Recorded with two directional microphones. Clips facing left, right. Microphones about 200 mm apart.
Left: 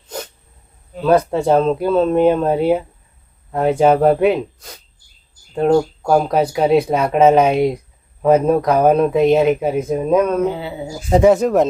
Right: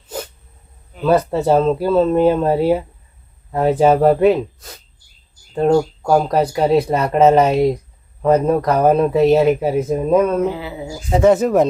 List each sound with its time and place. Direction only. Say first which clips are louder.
1.0 s speech: left 1 dB; 5° right (ahead or behind)
10.5 s speech: left 1 dB; 30° left (ahead or behind)
11.3 s speech: right 2 dB; centre (ahead or behind)